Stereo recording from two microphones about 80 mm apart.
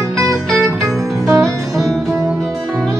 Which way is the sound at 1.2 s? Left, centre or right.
Centre.